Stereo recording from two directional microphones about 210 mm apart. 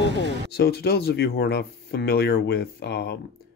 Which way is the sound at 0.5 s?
50° left (ahead or behind).